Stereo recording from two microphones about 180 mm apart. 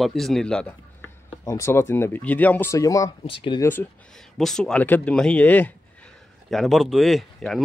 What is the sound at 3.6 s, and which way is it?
Speech, 10° left (ahead or behind).